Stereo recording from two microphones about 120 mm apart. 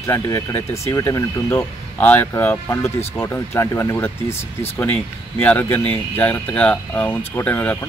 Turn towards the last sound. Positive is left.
turn(degrees=10)  # may be behind; listen again after turning